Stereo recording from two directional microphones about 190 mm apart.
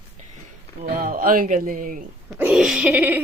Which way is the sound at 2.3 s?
5° right (ahead or behind).